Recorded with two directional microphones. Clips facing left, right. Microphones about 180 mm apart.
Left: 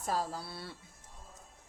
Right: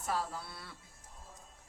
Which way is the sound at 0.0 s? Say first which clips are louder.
Left 2 dB; 40° left (ahead or behind).